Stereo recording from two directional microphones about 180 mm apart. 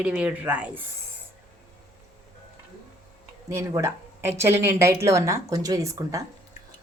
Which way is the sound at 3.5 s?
15° right (ahead or behind).